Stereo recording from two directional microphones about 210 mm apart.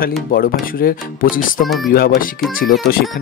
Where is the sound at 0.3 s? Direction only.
45° left (ahead or behind).